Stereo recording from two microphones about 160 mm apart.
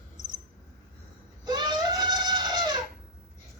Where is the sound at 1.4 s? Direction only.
25° right (ahead or behind).